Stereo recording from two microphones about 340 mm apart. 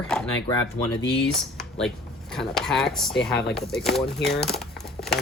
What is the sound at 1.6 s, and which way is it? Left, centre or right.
Speech, centre.